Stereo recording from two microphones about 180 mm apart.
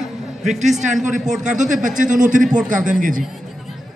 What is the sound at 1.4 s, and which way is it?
A man's voice, 45° right (ahead or behind).